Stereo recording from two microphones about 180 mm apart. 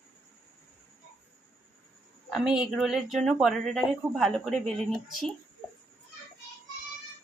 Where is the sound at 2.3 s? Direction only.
Centre (ahead or behind).